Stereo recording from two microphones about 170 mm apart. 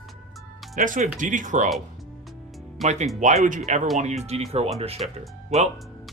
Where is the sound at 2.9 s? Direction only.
40° right (ahead or behind).